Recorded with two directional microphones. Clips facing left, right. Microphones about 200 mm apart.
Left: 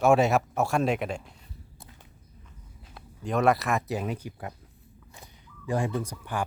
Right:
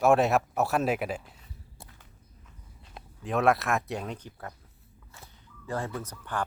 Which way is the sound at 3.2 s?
Centre (ahead or behind).